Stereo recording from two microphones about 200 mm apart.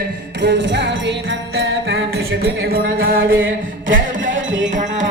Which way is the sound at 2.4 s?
50° right (ahead or behind).